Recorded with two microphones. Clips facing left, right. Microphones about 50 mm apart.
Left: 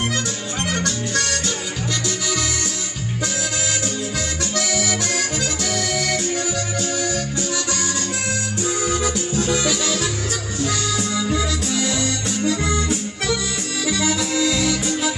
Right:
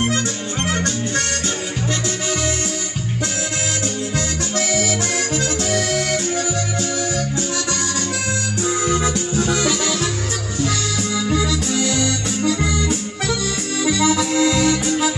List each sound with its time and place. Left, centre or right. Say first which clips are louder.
4.6 s accordion: right 2 dB; right
5.7 s music: right 2 dB; right
8.6 s music: right 3 dB; right
9.4 s music: right 1 dB; right
11.2 s music: right 2 dB; right
11.9 s accordion: right 2 dB; right
13.8 s accordion: right 4 dB; right